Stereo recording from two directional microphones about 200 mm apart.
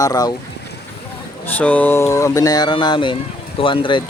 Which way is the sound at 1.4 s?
5° left (ahead or behind).